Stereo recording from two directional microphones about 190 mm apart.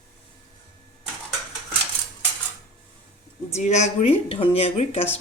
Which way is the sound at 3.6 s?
35° left (ahead or behind).